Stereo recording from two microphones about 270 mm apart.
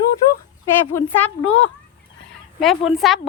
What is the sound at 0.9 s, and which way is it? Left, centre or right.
Speech, centre.